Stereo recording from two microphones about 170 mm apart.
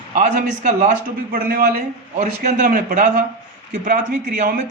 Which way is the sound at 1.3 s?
60° right (ahead or behind).